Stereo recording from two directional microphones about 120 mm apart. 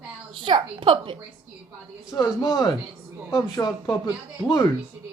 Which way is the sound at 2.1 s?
30° left (ahead or behind).